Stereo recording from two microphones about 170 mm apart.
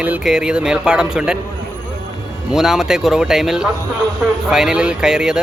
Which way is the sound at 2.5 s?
Centre (ahead or behind).